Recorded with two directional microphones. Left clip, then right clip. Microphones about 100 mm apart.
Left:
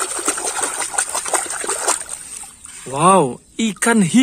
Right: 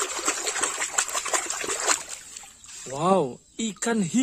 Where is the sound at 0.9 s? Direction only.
80° right.